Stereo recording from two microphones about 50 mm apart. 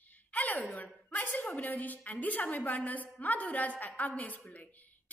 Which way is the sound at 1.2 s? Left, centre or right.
Left.